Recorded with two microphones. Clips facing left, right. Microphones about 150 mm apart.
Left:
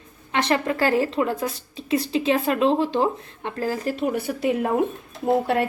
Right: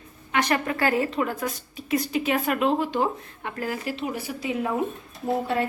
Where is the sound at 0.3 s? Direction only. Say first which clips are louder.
Left 2 dB; 25° left (ahead or behind).